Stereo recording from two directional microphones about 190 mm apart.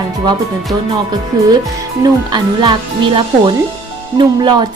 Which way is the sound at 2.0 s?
25° right (ahead or behind).